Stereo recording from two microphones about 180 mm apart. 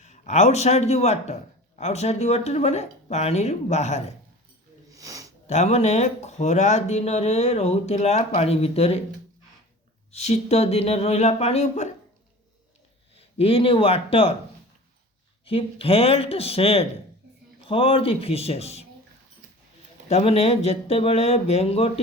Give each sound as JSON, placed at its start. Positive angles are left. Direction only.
{"t": 0.0, "sound": "speech", "side_deg": 40}
{"t": 4.9, "sound": "snort", "side_deg": -20}
{"t": 5.5, "sound": "speech", "side_deg": 40}
{"t": 10.1, "sound": "speech", "side_deg": 40}
{"t": 13.1, "sound": "speech", "side_deg": 30}
{"t": 15.4, "sound": "speech", "side_deg": 30}
{"t": 20.1, "sound": "speech", "side_deg": 35}